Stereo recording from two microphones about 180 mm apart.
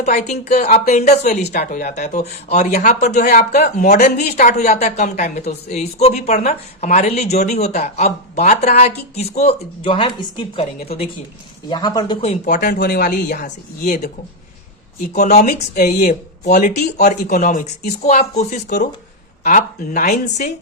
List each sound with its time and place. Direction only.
0.0 s speech: 40° left (ahead or behind)
11.7 s speech: 25° left (ahead or behind); by 14.1 s 55° left (ahead or behind)
15.4 s speech: 45° left (ahead or behind)